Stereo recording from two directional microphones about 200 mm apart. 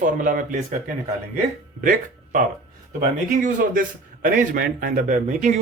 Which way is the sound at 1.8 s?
40° right (ahead or behind).